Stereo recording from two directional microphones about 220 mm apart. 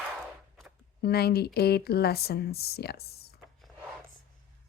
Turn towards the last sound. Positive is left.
turn(degrees=45)  # may be behind; listen again after turning